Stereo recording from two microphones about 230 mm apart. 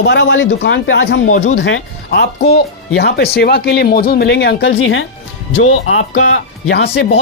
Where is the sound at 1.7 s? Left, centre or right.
Left.